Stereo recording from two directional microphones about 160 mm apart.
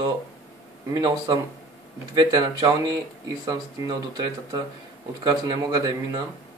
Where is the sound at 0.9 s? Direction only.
25° right (ahead or behind).